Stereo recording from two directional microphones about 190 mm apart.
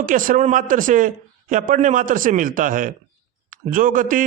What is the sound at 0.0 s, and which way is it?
A man's voice, 45° right (ahead or behind).